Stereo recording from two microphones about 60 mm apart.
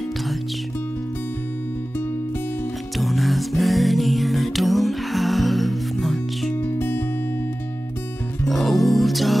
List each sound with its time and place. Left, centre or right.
3.0 s music: centre
6.5 s music: left
8.5 s music: centre